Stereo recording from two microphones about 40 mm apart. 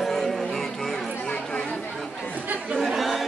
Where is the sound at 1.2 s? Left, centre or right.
Left.